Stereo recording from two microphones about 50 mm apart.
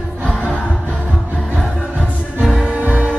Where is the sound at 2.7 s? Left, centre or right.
Right.